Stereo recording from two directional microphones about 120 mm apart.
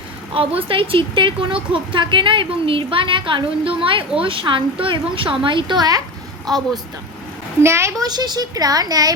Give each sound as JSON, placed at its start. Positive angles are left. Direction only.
{"t": 0.3, "sound": "speech", "side_deg": -50}
{"t": 7.6, "sound": "a woman's voice", "side_deg": -20}
{"t": 8.0, "sound": "speech", "side_deg": -35}